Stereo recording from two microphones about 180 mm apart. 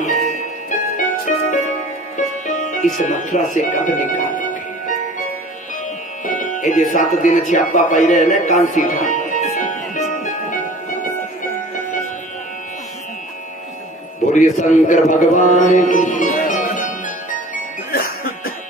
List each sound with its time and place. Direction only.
0.7 s music: 45° left (ahead or behind)
2.1 s speech: 45° left (ahead or behind)
6.2 s music: 45° left (ahead or behind)
14.3 s speech: 45° left (ahead or behind)
17.9 s music: 55° left (ahead or behind)